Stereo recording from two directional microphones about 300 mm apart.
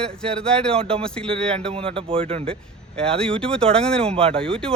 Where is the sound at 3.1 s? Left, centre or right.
Centre.